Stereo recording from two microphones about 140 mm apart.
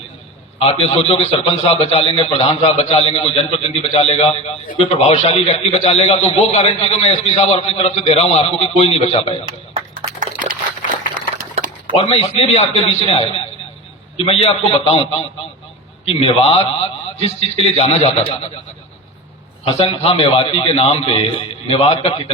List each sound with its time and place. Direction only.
0.6 s a man's voice: 45° left (ahead or behind)
10.2 s a sound: 70° right (ahead or behind)
11.9 s a man's voice: 50° left (ahead or behind)
16.2 s a man's voice: 45° left (ahead or behind)
19.6 s a man's voice: 45° left (ahead or behind)